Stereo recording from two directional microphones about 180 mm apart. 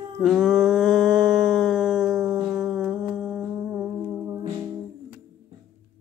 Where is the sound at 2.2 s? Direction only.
20° right (ahead or behind).